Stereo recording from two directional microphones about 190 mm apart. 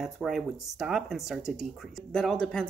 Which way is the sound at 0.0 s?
Centre (ahead or behind).